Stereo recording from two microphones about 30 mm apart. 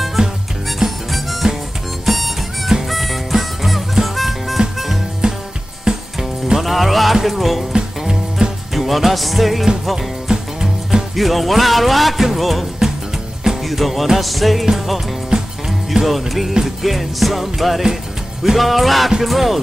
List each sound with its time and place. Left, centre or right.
0.2 s music: right
0.7 s harmonica: centre
3.9 s music: centre
5.2 s music: right
6.6 s music: centre
7.2 s speech: centre
8.4 s music: right
8.7 s music: centre
10.2 s music: centre
11.1 s speech: centre
13.7 s speech: centre
15.3 s music: right
16.1 s speech: centre